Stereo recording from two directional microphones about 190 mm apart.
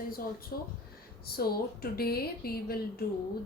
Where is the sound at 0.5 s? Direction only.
50° left (ahead or behind).